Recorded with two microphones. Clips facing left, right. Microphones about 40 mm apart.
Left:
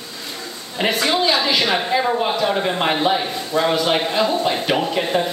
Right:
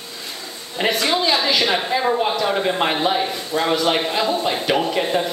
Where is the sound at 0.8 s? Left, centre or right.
Centre.